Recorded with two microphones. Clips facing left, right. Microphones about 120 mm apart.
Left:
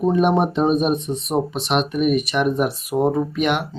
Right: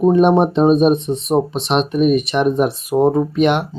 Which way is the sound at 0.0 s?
25° right (ahead or behind).